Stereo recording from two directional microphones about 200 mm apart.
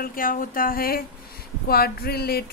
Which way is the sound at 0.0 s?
45° left (ahead or behind).